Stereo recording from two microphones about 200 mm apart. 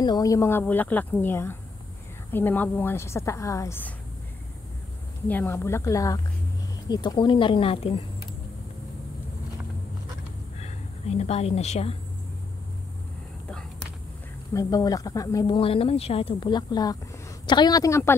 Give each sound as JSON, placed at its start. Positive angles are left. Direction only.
{"t": 0.0, "sound": "speech", "side_deg": 20}
{"t": 5.3, "sound": "speech", "side_deg": 10}
{"t": 10.6, "sound": "speech", "side_deg": 30}
{"t": 13.5, "sound": "a sound", "side_deg": 5}
{"t": 14.5, "sound": "speech", "side_deg": 15}